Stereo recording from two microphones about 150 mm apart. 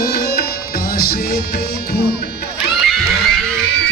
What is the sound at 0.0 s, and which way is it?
Music, 90° left.